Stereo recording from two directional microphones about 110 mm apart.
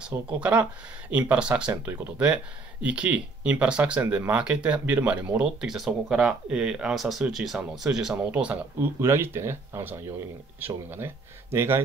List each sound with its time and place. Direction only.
0.1 s speech: 15° right (ahead or behind)
9.0 s speech: 20° right (ahead or behind)
11.5 s speech: 25° right (ahead or behind)